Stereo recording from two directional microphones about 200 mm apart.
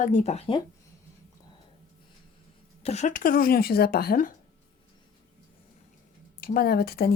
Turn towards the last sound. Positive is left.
turn(degrees=50)  # may be behind; listen again after turning